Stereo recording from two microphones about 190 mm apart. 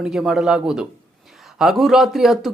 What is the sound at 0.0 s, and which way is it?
Speech, 5° right (ahead or behind).